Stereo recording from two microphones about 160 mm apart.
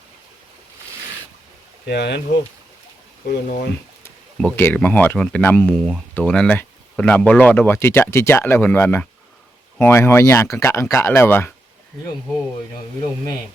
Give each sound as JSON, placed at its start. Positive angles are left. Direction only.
{"t": 1.9, "sound": "speech", "side_deg": 90}
{"t": 3.2, "sound": "speech", "side_deg": 65}
{"t": 4.5, "sound": "speech", "side_deg": 10}